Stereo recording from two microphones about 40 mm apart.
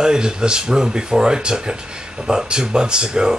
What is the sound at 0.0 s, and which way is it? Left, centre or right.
Speech, centre.